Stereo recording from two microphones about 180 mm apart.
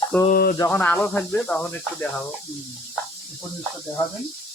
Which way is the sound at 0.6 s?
10° left (ahead or behind).